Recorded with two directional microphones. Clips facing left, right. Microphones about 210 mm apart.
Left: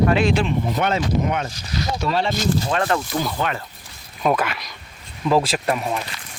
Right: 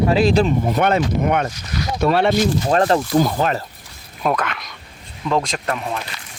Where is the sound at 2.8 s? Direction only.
35° right (ahead or behind).